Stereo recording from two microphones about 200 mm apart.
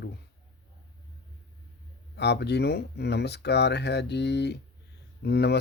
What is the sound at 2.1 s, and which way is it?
Speech, 55° left (ahead or behind).